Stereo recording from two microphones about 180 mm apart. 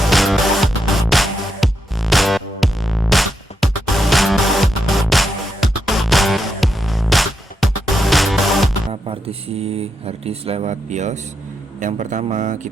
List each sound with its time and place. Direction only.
0.0 s music: centre (ahead or behind)
8.9 s speech: 35° right (ahead or behind)